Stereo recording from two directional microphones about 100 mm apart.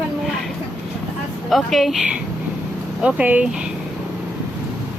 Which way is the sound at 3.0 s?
15° right (ahead or behind).